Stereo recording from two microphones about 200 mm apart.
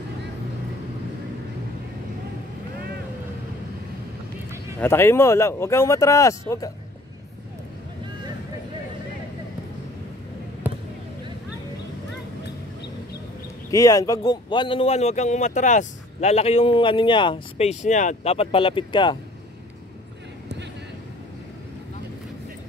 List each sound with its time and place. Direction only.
4.7 s speech: 10° left (ahead or behind)
10.6 s basketball bounce: 10° right (ahead or behind)
13.7 s speech: 15° left (ahead or behind)